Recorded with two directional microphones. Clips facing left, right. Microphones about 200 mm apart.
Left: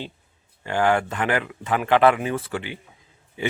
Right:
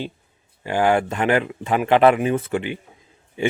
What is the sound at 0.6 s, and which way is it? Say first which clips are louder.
A man's voice: right 2 dB; 15° right (ahead or behind).